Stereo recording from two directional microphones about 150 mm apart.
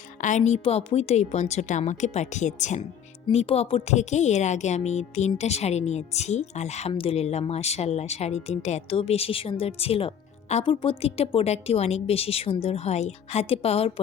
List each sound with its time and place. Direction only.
0.2 s speech: 55° left (ahead or behind)
3.2 s a woman's voice: 40° left (ahead or behind)